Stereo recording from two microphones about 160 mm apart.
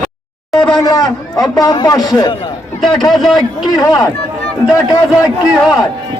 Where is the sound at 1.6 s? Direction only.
25° left (ahead or behind).